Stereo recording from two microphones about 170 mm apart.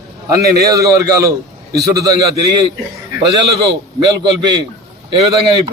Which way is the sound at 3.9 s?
25° right (ahead or behind).